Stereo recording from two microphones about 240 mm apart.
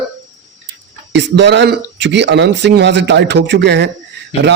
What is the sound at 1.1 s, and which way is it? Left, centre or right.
Speech, right.